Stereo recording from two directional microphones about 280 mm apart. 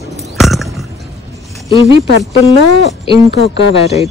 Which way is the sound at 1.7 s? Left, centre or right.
Centre.